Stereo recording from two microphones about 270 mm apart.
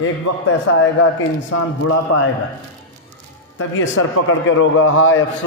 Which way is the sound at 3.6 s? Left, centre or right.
Left.